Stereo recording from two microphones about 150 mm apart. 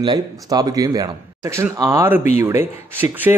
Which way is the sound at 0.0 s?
25° right (ahead or behind).